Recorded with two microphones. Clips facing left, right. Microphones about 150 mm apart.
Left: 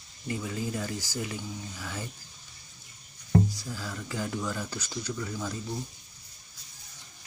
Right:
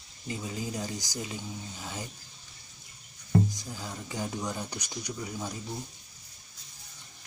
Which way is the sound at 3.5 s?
20° right (ahead or behind).